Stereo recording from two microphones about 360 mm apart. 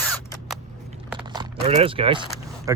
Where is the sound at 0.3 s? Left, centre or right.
Centre.